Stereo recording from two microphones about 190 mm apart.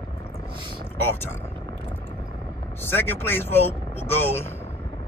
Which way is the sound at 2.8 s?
10° left (ahead or behind).